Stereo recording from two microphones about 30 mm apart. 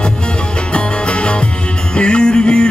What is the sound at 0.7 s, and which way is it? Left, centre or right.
Music, left.